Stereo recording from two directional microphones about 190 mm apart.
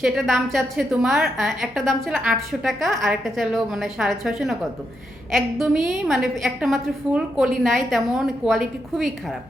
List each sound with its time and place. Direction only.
0.0 s a woman's voice: centre (ahead or behind)